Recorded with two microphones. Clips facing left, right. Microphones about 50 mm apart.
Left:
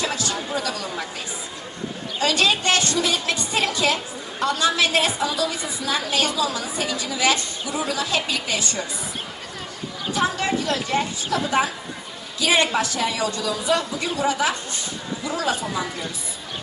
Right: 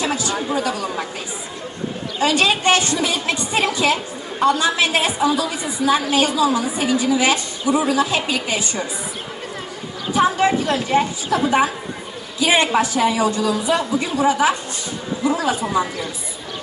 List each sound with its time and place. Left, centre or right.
0.0 s speech: right
2.1 s a woman's voice: right
10.2 s a woman's voice: right